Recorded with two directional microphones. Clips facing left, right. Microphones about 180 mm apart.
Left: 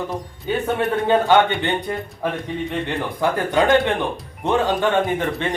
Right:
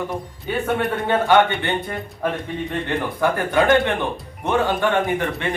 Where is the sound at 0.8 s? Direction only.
20° left (ahead or behind).